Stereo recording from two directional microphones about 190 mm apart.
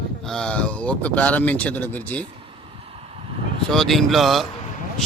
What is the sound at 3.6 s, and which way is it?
Speech, centre (ahead or behind).